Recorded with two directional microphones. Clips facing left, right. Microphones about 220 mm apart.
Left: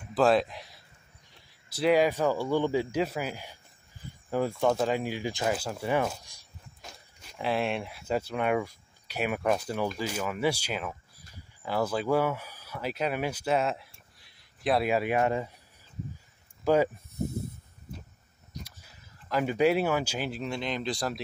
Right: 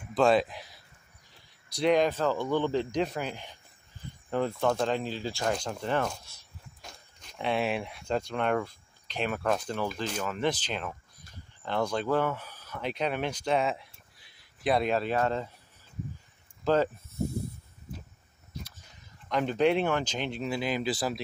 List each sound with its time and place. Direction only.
0.1 s speech: centre (ahead or behind)
16.6 s a sound: 10° left (ahead or behind)
18.5 s speech: 10° left (ahead or behind)